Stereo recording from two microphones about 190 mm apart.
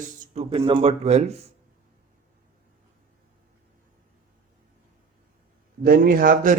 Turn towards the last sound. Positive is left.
turn(degrees=-50)  # may be behind; listen again after turning